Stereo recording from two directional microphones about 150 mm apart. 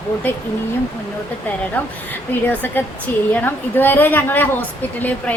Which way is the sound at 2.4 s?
15° left (ahead or behind).